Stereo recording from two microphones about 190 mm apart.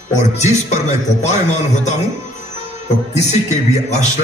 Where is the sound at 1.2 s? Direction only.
35° left (ahead or behind).